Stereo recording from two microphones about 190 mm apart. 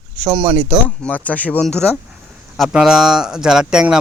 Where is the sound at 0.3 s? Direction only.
20° right (ahead or behind).